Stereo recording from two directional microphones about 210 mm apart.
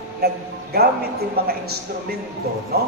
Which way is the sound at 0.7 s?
50° right (ahead or behind).